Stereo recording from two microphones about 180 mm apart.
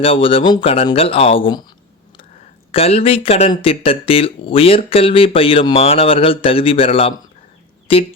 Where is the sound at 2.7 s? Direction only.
35° left (ahead or behind).